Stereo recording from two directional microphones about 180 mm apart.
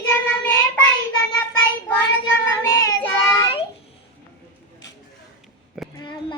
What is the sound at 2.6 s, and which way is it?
Child singing, 15° left (ahead or behind).